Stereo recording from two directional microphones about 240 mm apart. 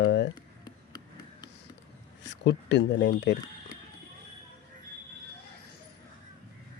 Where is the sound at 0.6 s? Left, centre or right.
Centre.